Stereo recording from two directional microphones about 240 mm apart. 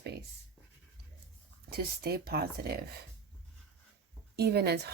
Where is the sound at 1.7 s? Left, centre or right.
Right.